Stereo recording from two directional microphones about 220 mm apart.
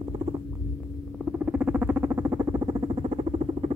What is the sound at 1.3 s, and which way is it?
Rodents, 5° right (ahead or behind).